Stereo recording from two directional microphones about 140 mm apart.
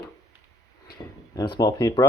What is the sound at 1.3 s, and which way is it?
Speech, 30° left (ahead or behind).